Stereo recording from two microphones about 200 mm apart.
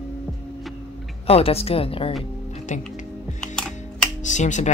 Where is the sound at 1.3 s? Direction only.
30° left (ahead or behind).